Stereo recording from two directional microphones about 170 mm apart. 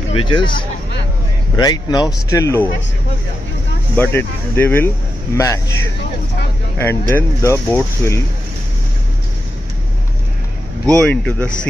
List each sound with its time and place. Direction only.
0.1 s speech: 30° left (ahead or behind)
1.6 s speech: 25° left (ahead or behind)
3.9 s speech: 10° left (ahead or behind)
6.8 s speech: 15° left (ahead or behind)
11.0 s speech: 5° left (ahead or behind)